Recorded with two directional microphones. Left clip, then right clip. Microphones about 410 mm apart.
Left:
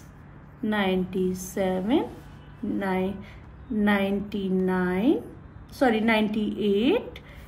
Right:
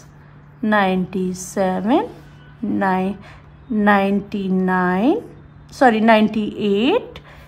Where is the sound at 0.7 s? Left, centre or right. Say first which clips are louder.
Right 8 dB; centre.